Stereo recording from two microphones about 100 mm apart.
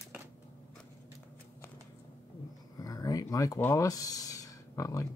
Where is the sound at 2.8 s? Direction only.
35° left (ahead or behind).